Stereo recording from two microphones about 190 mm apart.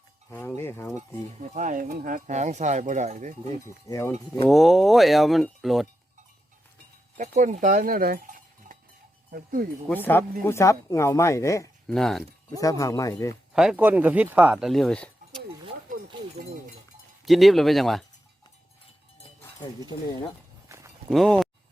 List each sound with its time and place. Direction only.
0.3 s speech: 10° left (ahead or behind)
1.4 s speech: 40° right (ahead or behind)
3.8 s speech: 15° left (ahead or behind)
4.4 s speech: centre (ahead or behind)
7.2 s speech: 40° right (ahead or behind)
9.9 s speech: 10° left (ahead or behind)
11.9 s speech: centre (ahead or behind)
12.5 s speech: 20° left (ahead or behind)
13.5 s speech: 5° right (ahead or behind)
17.2 s speech: centre (ahead or behind)
20.7 s walk: 15° right (ahead or behind)
21.1 s speech: centre (ahead or behind)